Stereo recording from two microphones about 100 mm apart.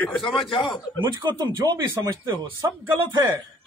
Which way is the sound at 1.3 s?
45° right (ahead or behind).